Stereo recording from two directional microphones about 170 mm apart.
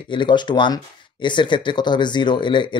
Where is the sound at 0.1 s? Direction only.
25° left (ahead or behind).